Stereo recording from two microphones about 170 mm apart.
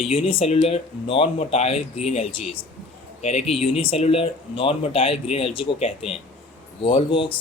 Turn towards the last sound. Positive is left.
turn(degrees=30)  # may be behind; listen again after turning